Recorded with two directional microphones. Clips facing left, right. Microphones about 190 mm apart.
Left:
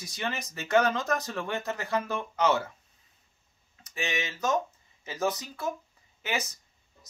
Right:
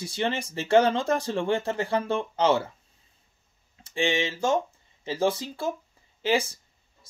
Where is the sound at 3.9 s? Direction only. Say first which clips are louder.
Right 7 dB; 30° right (ahead or behind).